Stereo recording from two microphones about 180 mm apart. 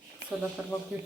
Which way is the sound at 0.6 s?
10° right (ahead or behind).